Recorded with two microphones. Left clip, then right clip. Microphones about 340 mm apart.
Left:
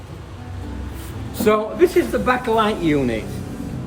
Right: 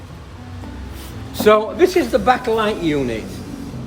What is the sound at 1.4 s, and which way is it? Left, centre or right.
Speech, centre.